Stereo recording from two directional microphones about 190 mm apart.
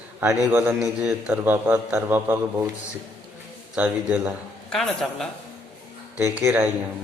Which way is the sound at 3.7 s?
10° right (ahead or behind).